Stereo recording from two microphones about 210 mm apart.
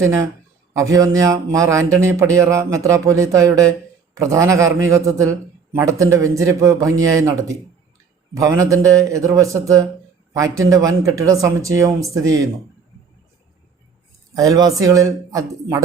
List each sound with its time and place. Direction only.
0.0 s speech: 15° right (ahead or behind)
14.3 s speech: 15° right (ahead or behind)